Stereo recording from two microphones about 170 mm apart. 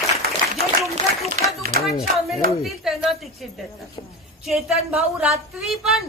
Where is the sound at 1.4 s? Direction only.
45° right (ahead or behind).